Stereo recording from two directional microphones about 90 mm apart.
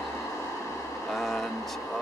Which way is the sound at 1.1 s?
Centre (ahead or behind).